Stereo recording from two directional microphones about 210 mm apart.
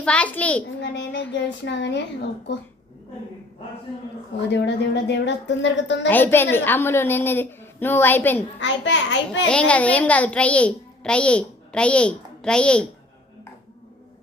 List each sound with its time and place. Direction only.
0.0 s a child's voice: 5° left (ahead or behind)
0.8 s a child's voice: 60° left (ahead or behind)
4.4 s a woman's voice: 55° left (ahead or behind)
6.1 s a woman's voice: 10° left (ahead or behind)
8.5 s a woman's voice: 60° left (ahead or behind)
9.5 s a child's voice: 5° left (ahead or behind)